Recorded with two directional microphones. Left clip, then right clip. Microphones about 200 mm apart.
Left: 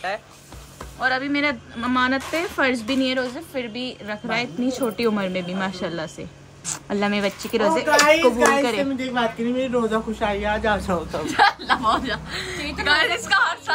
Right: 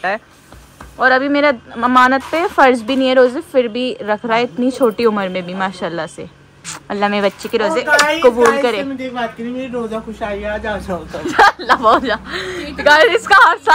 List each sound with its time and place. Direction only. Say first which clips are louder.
1.0 s a woman's voice: right 10 dB; 5° right (ahead or behind)